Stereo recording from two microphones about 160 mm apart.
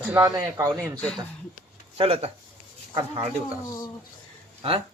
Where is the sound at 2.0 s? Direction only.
35° right (ahead or behind).